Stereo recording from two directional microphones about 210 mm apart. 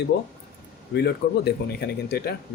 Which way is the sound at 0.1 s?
50° left (ahead or behind).